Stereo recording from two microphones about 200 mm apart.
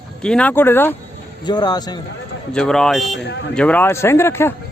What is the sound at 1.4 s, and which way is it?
Speech, 20° left (ahead or behind).